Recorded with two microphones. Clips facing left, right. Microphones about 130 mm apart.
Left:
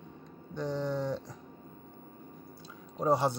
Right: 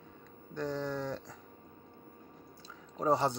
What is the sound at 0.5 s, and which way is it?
Speech, 15° left (ahead or behind).